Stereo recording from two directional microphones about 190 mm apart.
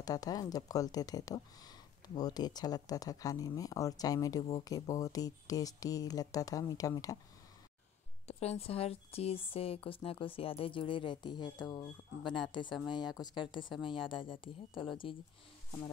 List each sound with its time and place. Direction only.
0.0 s speech: 20° left (ahead or behind)
8.3 s speech: 35° left (ahead or behind)